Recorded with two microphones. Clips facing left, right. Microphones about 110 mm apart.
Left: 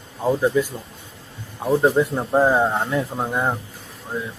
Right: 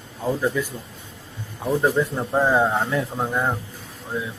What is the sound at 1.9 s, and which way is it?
Speech, 15° left (ahead or behind).